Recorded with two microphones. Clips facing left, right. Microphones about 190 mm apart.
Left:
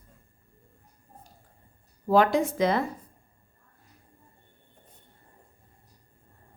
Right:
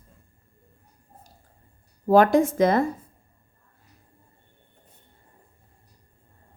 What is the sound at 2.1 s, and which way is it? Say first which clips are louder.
Speech: right 5 dB; 45° right (ahead or behind).